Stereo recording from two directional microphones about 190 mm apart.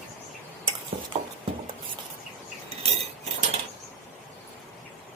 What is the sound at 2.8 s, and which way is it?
Cutlery, 30° right (ahead or behind).